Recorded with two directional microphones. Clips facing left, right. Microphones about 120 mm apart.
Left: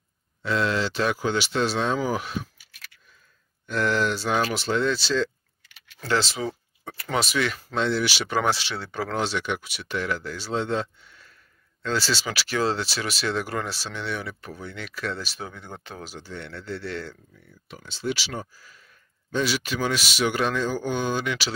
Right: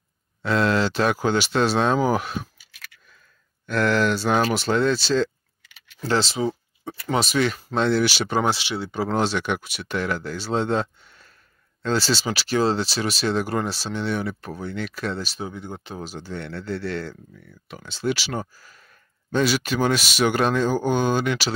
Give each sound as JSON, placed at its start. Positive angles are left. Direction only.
{"t": 0.4, "sound": "speech", "side_deg": -50}
{"t": 3.6, "sound": "speech", "side_deg": -70}
{"t": 6.0, "sound": "speech", "side_deg": -30}
{"t": 8.4, "sound": "speech", "side_deg": -20}
{"t": 9.1, "sound": "speech", "side_deg": -50}
{"t": 15.4, "sound": "speech", "side_deg": -15}
{"t": 16.0, "sound": "speech", "side_deg": -35}
{"t": 17.6, "sound": "speech", "side_deg": -65}